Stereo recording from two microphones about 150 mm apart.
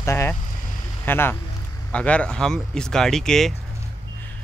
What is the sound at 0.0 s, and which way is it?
Vehicle, 20° left (ahead or behind).